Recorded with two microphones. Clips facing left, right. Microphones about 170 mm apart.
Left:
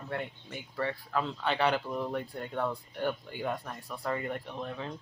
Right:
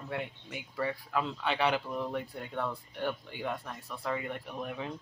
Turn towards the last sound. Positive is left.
turn(degrees=-15)  # may be behind; listen again after turning